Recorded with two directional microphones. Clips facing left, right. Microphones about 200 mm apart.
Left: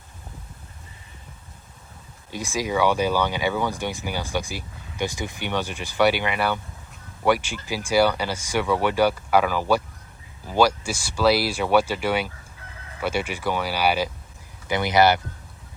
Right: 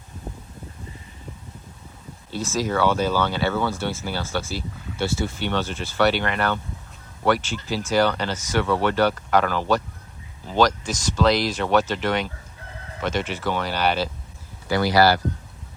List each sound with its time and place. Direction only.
2.3 s speech: 15° left (ahead or behind)